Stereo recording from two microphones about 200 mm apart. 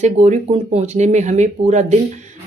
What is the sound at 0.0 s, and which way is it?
Speech, 35° right (ahead or behind).